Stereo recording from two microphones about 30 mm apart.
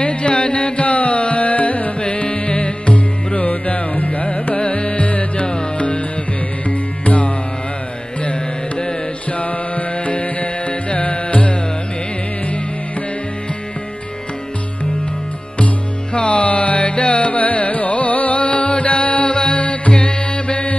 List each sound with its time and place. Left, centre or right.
0.0 s music: left
0.8 s carnatic music: left
2.0 s music: left
3.3 s music: left
4.6 s music: left
5.5 s music: left
6.7 s music: left
9.4 s music: left
15.5 s music: left
19.9 s music: left